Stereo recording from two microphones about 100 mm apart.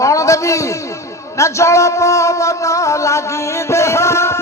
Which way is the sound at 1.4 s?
30° left (ahead or behind).